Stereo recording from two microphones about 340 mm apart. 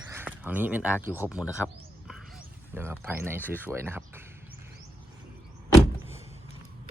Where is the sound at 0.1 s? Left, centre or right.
Centre.